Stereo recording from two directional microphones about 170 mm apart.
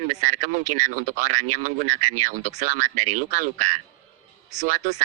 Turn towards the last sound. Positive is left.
turn(degrees=-45)  # may be behind; listen again after turning